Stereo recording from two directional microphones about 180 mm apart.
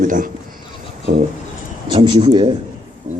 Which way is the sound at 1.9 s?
25° right (ahead or behind).